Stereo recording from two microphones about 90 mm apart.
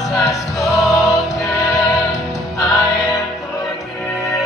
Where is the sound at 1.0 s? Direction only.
40° left (ahead or behind).